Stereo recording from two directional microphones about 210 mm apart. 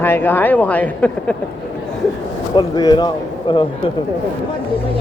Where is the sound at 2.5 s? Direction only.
20° left (ahead or behind).